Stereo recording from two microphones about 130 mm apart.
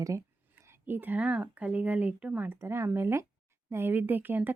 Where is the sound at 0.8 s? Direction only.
15° right (ahead or behind).